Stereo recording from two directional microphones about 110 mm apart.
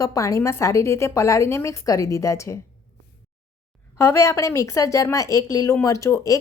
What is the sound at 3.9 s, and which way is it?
Speech, 25° left (ahead or behind).